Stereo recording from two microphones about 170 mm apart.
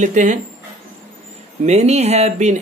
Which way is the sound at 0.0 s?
45° right (ahead or behind).